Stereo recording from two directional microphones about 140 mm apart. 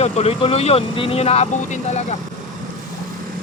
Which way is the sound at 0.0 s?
50° left (ahead or behind).